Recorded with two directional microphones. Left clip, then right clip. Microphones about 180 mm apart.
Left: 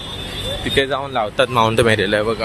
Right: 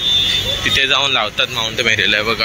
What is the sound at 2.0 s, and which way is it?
Speech, 25° left (ahead or behind).